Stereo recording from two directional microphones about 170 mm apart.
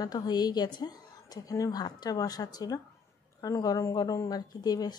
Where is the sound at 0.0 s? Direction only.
25° left (ahead or behind).